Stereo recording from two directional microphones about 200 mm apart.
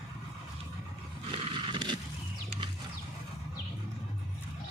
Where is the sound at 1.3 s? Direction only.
25° right (ahead or behind).